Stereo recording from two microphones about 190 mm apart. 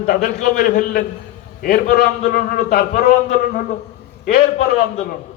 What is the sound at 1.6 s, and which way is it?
A man's voice, 55° left (ahead or behind).